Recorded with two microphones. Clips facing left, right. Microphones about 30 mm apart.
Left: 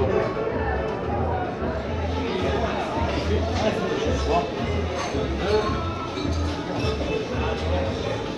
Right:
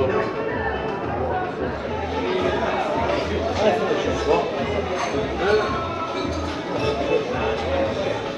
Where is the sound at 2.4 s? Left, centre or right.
Right.